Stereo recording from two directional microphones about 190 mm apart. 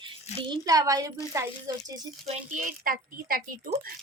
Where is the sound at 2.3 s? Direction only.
45° right (ahead or behind).